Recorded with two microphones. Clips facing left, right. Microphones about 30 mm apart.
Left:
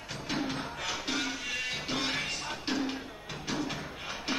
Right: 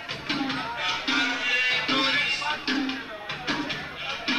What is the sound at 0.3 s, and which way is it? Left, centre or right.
Music, right.